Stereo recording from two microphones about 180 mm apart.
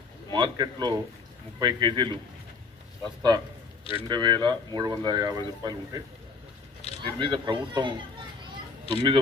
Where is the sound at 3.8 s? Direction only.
30° left (ahead or behind).